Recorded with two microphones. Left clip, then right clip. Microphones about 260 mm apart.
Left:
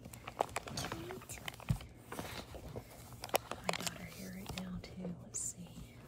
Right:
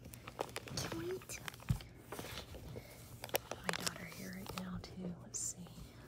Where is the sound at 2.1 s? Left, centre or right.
Centre.